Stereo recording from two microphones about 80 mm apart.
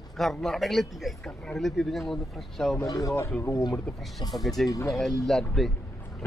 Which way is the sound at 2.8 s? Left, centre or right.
Left.